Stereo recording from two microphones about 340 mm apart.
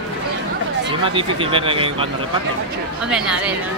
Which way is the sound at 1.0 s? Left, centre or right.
Centre.